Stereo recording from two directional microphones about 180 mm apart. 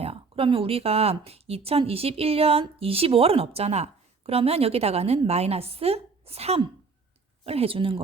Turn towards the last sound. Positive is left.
turn(degrees=-30)  # may be behind; listen again after turning